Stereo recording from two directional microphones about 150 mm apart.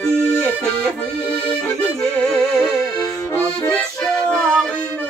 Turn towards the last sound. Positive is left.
turn(degrees=5)  # may be behind; listen again after turning